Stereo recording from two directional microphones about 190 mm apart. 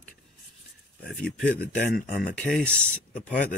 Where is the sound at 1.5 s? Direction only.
55° left (ahead or behind).